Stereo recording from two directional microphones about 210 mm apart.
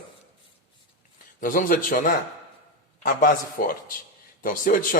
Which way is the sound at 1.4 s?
40° left (ahead or behind).